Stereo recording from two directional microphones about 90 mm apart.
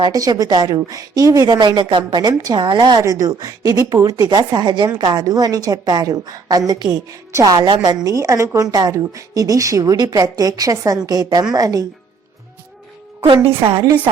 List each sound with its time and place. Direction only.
0.0 s a woman's voice: 45° right (ahead or behind)
0.8 s a woman's voice: 40° right (ahead or behind); by 2.0 s 60° right (ahead or behind)
2.1 s a woman's voice: 50° right (ahead or behind)
3.0 s a woman's voice: 40° right (ahead or behind)
5.2 s a woman's voice: 40° right (ahead or behind)
7.1 s a woman's voice: 40° right (ahead or behind)
8.0 s a woman's voice: 35° right (ahead or behind)
13.6 s a woman's voice: 90° right